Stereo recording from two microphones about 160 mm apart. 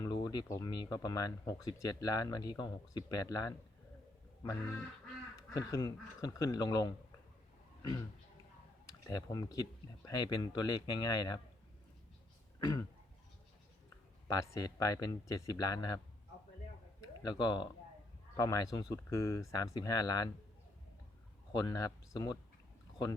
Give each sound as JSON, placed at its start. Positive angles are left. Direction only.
{"t": 0.0, "sound": "speech", "side_deg": 25}
{"t": 5.5, "sound": "speech", "side_deg": 20}
{"t": 9.0, "sound": "speech", "side_deg": 20}
{"t": 12.5, "sound": "throat clearing", "side_deg": 25}
{"t": 14.3, "sound": "speech", "side_deg": 20}
{"t": 17.2, "sound": "speech", "side_deg": 25}
{"t": 21.5, "sound": "speech", "side_deg": 25}